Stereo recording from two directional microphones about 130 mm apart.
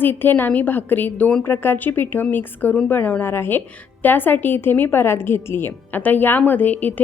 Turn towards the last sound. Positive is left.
turn(degrees=15)  # may be behind; listen again after turning